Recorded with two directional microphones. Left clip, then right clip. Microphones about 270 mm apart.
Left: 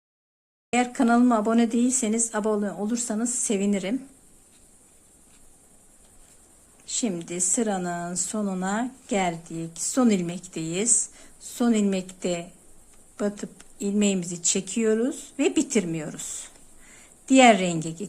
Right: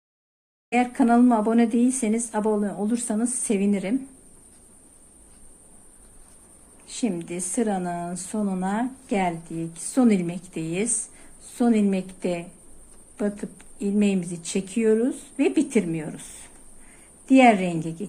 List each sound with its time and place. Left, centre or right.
0.7 s speech: centre
6.8 s a woman's voice: centre